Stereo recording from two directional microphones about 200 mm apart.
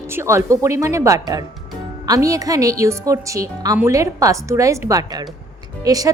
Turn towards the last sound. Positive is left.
turn(degrees=-15)  # may be behind; listen again after turning